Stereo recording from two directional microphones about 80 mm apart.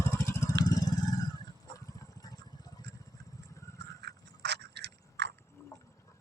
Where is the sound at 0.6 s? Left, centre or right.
Left.